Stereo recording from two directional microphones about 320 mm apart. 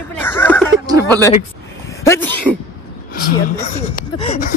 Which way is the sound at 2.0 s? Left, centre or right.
Centre.